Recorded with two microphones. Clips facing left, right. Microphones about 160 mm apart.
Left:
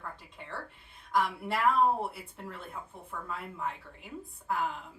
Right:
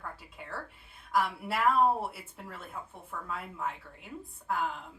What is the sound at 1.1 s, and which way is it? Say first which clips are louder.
Speech: even; 5° right (ahead or behind).